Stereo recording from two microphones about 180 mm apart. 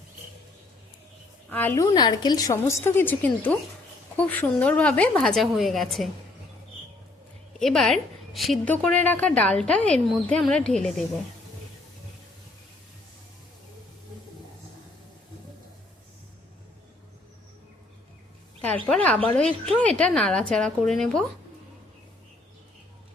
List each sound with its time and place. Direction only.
1.5 s a woman's voice: 10° left (ahead or behind)
7.6 s a woman's voice: centre (ahead or behind)
18.6 s a woman's voice: 10° left (ahead or behind)